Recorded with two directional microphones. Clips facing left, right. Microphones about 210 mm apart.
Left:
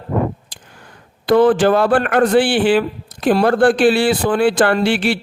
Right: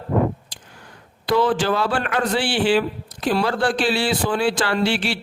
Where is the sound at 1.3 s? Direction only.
55° left (ahead or behind).